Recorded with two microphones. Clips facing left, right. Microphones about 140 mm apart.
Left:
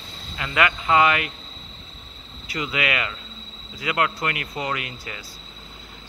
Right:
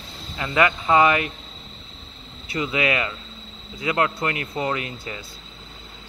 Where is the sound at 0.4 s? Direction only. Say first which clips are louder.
Right 2 dB; 25° right (ahead or behind).